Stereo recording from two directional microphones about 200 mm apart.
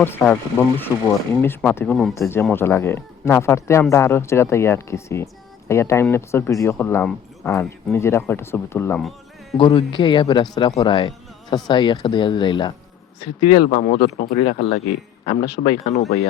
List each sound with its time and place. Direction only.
0.0 s speech: 10° left (ahead or behind)
7.9 s speech: 15° left (ahead or behind)
9.6 s speech: 25° left (ahead or behind)
13.7 s speech: 40° left (ahead or behind)
14.3 s speech: 35° left (ahead or behind)